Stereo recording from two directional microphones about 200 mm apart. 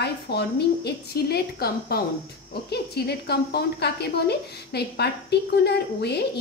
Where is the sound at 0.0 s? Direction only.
55° left (ahead or behind).